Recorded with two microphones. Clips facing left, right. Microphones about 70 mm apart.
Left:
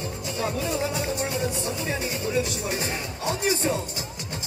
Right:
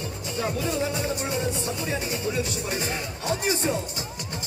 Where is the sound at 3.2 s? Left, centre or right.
Right.